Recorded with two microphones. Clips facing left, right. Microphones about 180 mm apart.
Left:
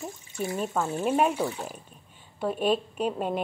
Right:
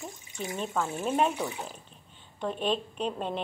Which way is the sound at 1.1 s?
5° left (ahead or behind).